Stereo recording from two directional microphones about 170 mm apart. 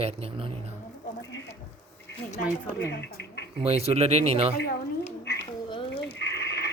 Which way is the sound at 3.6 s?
35° right (ahead or behind).